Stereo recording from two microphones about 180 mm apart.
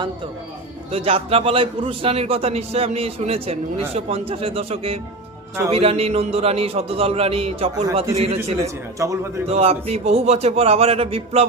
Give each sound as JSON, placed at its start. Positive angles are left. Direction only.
{"t": 0.9, "sound": "a man's voice", "side_deg": -35}
{"t": 9.0, "sound": "a man's voice", "side_deg": -15}
{"t": 9.5, "sound": "a man's voice", "side_deg": -35}